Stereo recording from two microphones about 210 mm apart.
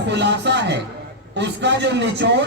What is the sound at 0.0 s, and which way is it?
A man's voice, 55° right (ahead or behind).